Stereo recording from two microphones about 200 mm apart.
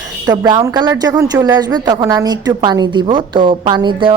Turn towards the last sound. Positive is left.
turn(degrees=-25)  # may be behind; listen again after turning